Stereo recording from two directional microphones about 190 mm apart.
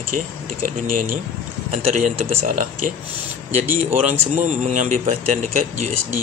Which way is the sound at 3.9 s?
40° right (ahead or behind).